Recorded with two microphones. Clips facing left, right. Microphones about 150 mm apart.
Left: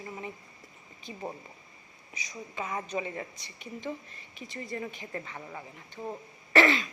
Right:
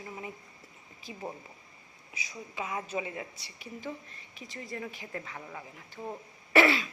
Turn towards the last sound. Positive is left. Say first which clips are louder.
# even
turn(degrees=-10)  # may be behind; listen again after turning